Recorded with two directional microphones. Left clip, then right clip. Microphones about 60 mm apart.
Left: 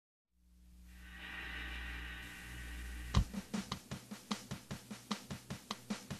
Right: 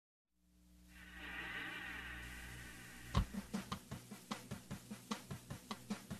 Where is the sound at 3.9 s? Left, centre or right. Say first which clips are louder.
Left 4 dB; centre.